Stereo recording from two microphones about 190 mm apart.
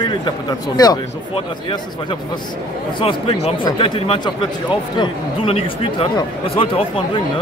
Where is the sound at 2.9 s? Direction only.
30° left (ahead or behind).